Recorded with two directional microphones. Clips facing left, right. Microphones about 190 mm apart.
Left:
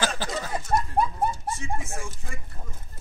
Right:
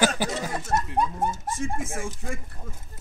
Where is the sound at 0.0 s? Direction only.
15° right (ahead or behind).